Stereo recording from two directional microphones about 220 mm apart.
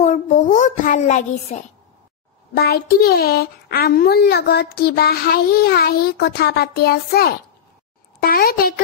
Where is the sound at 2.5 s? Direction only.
45° left (ahead or behind).